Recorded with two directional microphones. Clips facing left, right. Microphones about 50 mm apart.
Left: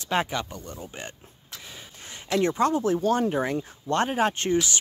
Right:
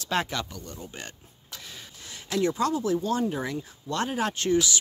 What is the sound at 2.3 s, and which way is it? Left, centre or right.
Speech, left.